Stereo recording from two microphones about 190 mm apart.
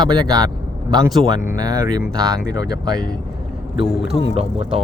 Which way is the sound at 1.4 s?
20° right (ahead or behind).